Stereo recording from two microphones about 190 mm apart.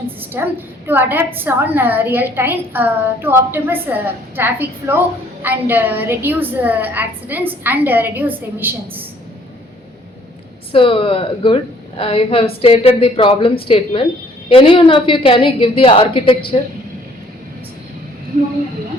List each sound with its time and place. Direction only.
0.4 s a woman's voice: 10° right (ahead or behind)
10.7 s a woman's voice: 25° left (ahead or behind)